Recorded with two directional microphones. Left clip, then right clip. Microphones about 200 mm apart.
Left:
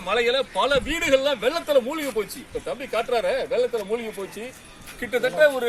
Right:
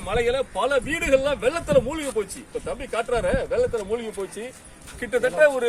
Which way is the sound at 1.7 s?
10° right (ahead or behind).